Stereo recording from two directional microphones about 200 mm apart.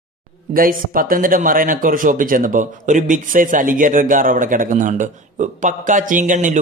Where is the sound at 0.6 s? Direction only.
45° right (ahead or behind).